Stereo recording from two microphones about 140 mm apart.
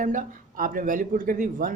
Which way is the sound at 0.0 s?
75° right (ahead or behind).